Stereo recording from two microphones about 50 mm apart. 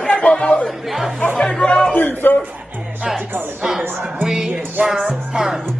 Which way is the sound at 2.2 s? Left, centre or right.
Left.